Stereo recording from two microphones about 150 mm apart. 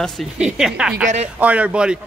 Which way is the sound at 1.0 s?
45° right (ahead or behind).